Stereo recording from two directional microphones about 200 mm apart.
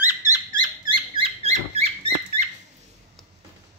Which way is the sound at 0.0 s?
10° right (ahead or behind).